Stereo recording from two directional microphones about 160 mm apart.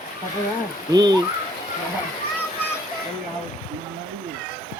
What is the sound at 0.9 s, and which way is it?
Speech, 25° right (ahead or behind).